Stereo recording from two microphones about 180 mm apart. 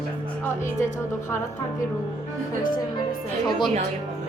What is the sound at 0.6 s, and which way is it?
Speech, 45° left (ahead or behind).